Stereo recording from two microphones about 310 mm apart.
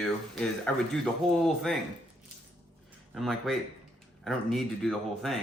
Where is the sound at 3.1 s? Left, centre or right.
Centre.